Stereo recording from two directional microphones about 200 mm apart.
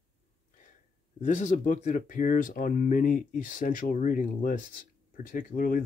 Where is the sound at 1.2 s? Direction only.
40° left (ahead or behind).